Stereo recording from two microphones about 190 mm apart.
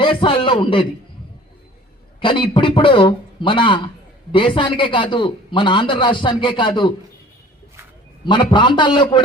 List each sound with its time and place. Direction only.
0.0 s a man's voice: 25° left (ahead or behind)
2.2 s a man's voice: 25° left (ahead or behind)
8.2 s a man's voice: 25° left (ahead or behind)